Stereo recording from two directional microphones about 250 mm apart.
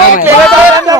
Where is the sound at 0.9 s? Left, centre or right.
Centre.